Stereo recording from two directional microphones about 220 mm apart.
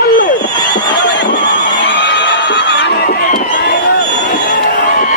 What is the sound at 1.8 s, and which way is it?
Crowd, 55° left (ahead or behind).